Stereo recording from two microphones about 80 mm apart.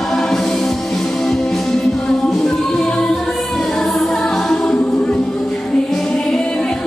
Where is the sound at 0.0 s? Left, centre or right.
Centre.